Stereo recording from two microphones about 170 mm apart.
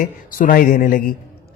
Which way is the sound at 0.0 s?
55° left (ahead or behind).